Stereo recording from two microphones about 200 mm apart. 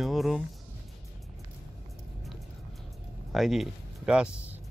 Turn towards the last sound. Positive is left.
turn(degrees=-5)  # may be behind; listen again after turning